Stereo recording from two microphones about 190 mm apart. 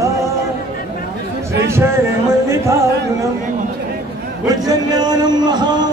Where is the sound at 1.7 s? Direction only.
15° right (ahead or behind).